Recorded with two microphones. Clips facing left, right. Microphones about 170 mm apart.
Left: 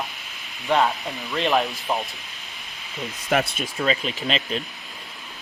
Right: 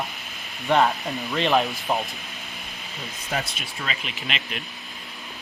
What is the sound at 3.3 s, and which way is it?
Speech, 65° left (ahead or behind).